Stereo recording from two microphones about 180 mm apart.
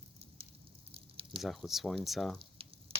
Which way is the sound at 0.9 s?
30° right (ahead or behind).